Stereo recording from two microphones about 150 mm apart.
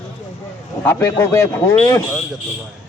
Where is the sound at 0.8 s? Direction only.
15° left (ahead or behind).